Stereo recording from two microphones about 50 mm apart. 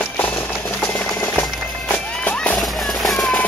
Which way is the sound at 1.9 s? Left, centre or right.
Left.